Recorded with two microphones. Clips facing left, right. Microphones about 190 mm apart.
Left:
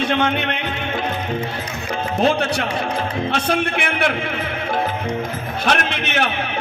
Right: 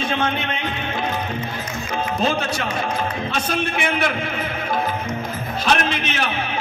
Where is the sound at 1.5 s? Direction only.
65° left (ahead or behind).